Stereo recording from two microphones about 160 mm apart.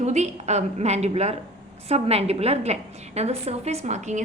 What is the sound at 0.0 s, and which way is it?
A woman's voice, 45° right (ahead or behind).